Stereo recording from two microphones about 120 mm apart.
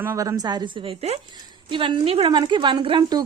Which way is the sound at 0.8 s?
60° right (ahead or behind).